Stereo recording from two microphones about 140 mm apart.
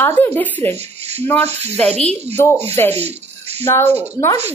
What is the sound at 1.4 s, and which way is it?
Speech, 50° right (ahead or behind).